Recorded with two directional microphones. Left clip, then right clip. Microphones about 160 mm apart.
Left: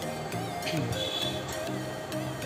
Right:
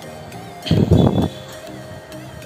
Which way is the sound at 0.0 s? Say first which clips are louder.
Even; centre (ahead or behind).